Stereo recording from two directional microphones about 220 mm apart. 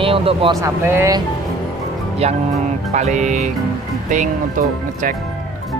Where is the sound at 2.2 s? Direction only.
30° right (ahead or behind).